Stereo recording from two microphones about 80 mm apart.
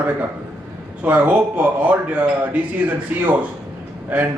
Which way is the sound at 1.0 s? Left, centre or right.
Centre.